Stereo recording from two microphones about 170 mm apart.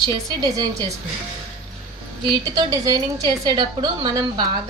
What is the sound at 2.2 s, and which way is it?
A woman's voice, 25° right (ahead or behind).